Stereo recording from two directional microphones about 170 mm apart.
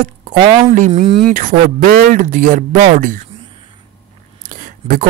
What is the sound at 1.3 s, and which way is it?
Speech, 50° right (ahead or behind).